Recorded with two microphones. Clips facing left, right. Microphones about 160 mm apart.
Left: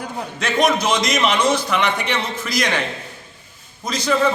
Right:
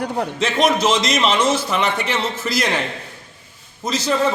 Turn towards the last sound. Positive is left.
turn(degrees=-5)  # may be behind; listen again after turning